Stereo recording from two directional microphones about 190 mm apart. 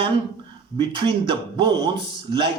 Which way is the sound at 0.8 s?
25° right (ahead or behind).